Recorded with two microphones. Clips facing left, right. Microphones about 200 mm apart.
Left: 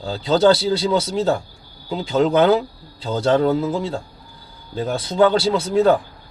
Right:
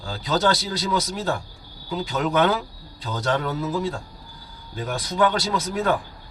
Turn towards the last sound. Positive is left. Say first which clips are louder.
# left 8 dB
turn(degrees=25)  # may be behind; listen again after turning